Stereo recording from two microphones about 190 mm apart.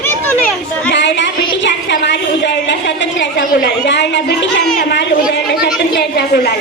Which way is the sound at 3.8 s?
65° left (ahead or behind).